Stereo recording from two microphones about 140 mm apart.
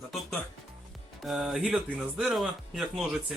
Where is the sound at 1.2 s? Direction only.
Centre (ahead or behind).